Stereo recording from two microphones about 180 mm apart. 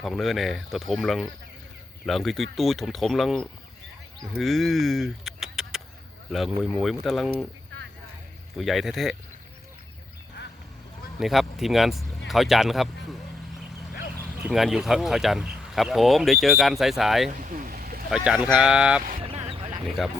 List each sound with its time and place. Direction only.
0.0 s speech: centre (ahead or behind)
8.5 s speech: centre (ahead or behind)
11.2 s speech: centre (ahead or behind)
14.4 s speech: centre (ahead or behind)
17.4 s stream: 50° right (ahead or behind)
18.1 s speech: centre (ahead or behind)
19.2 s a sound: 30° right (ahead or behind)